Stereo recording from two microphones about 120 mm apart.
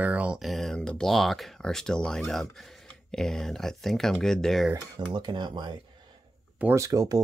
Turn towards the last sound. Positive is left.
turn(degrees=-30)  # may be behind; listen again after turning